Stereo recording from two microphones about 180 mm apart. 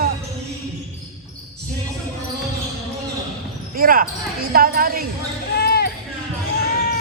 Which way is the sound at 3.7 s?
55° right (ahead or behind).